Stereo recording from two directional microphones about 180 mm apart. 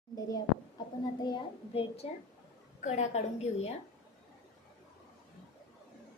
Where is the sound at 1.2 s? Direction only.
30° left (ahead or behind).